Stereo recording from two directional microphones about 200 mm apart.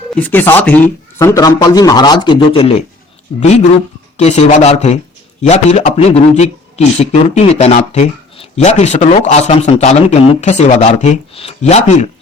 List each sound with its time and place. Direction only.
0.1 s speech: 10° left (ahead or behind); by 2.8 s 30° left (ahead or behind)
4.2 s a man's voice: 35° left (ahead or behind)